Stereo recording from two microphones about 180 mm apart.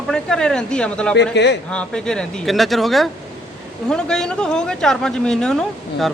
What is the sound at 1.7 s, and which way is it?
Speech, 5° left (ahead or behind).